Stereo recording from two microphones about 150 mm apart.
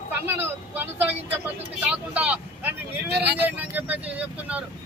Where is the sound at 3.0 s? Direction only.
90° right.